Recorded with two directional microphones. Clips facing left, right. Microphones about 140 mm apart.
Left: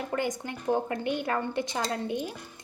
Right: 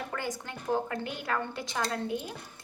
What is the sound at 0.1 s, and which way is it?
A woman's voice, 20° left (ahead or behind).